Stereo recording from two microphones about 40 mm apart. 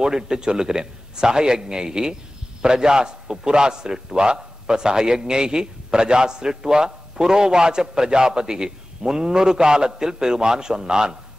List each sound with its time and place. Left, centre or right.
0.0 s a man's voice: centre